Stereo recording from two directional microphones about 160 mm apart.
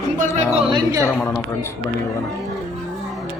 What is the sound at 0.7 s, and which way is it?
Speech, 20° right (ahead or behind).